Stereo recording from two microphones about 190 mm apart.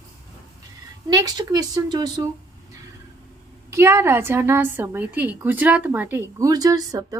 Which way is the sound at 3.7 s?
15° right (ahead or behind).